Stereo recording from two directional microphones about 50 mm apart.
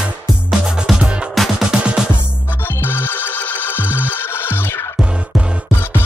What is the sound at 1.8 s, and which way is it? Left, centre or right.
Music, centre.